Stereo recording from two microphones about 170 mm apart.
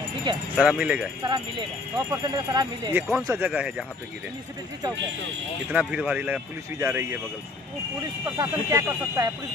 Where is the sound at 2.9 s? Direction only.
10° right (ahead or behind).